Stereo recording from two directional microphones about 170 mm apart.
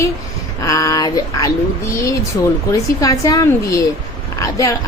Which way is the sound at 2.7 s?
20° left (ahead or behind).